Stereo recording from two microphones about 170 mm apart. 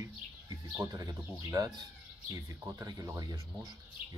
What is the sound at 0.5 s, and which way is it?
A man's voice, 20° right (ahead or behind).